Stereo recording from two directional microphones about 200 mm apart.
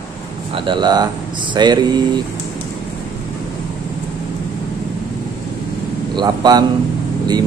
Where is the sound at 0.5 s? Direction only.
25° right (ahead or behind).